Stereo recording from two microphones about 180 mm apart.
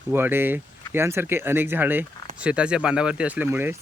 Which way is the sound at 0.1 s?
10° right (ahead or behind).